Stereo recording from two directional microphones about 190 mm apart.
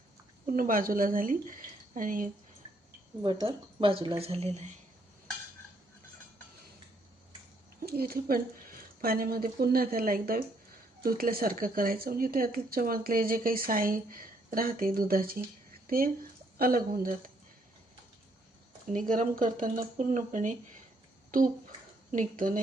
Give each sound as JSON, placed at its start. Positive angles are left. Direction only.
{"t": 0.4, "sound": "speech", "side_deg": -50}
{"t": 3.4, "sound": "speech", "side_deg": -30}
{"t": 7.9, "sound": "speech", "side_deg": -55}
{"t": 18.9, "sound": "speech", "side_deg": -45}
{"t": 21.2, "sound": "bathtub", "side_deg": -45}
{"t": 22.1, "sound": "speech", "side_deg": -45}